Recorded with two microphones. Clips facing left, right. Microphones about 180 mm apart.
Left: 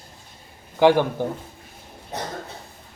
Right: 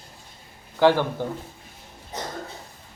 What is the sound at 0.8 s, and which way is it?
Speech, 15° left (ahead or behind).